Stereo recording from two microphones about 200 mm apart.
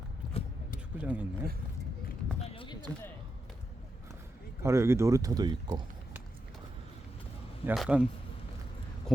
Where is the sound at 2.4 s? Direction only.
25° left (ahead or behind).